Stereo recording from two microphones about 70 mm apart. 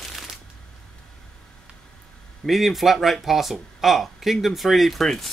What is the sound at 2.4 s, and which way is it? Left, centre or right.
Speech, centre.